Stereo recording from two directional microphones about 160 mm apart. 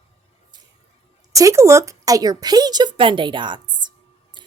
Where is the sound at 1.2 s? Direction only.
20° right (ahead or behind).